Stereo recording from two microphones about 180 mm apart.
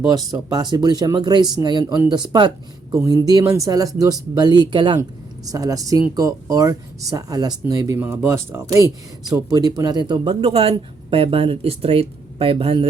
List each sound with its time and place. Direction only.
0.0 s speech: 20° right (ahead or behind)